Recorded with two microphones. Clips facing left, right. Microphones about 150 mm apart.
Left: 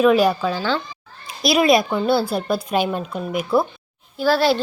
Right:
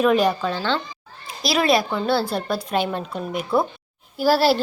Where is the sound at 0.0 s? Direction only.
5° left (ahead or behind).